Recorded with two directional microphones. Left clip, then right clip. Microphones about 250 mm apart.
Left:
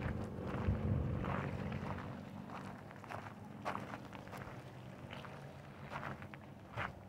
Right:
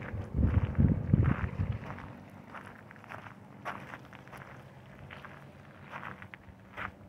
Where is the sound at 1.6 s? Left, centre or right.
Left.